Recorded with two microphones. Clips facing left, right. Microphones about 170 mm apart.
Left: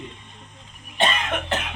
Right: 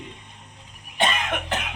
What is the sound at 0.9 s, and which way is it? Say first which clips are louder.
Cough: left 1 dB; 10° right (ahead or behind).